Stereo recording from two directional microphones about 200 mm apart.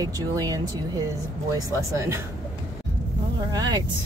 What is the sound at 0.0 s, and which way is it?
Speech, 15° right (ahead or behind).